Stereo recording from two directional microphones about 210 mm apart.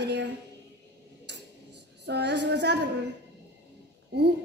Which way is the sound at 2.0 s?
55° right (ahead or behind).